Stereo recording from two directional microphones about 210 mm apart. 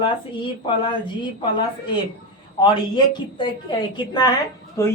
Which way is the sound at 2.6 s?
20° left (ahead or behind).